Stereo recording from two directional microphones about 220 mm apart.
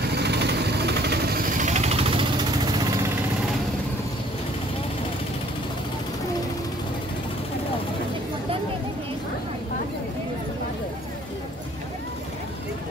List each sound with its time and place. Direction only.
0.1 s vehicle: 50° right (ahead or behind)
1.6 s vehicle: 30° right (ahead or behind)